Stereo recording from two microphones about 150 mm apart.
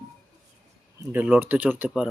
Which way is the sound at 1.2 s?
10° right (ahead or behind).